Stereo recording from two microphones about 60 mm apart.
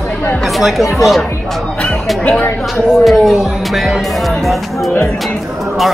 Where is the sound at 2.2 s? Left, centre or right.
Left.